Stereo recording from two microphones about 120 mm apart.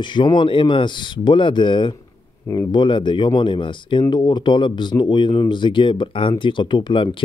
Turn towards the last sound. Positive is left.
turn(degrees=45)  # may be behind; listen again after turning